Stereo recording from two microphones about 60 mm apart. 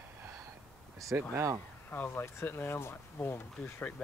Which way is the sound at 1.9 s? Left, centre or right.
Left.